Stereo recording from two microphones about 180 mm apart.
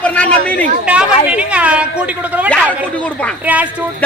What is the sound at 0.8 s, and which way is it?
A woman's voice, 5° right (ahead or behind).